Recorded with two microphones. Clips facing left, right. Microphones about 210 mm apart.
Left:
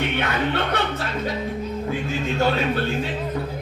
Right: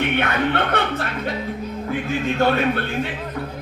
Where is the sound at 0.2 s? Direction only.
55° right (ahead or behind).